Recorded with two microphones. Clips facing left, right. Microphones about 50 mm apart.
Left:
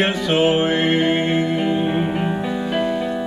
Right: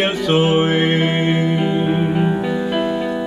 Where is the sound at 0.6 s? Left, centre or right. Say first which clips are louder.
Right 1 dB; centre.